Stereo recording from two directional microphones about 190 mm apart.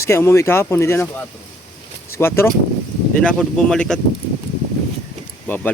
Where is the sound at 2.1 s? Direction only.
15° left (ahead or behind).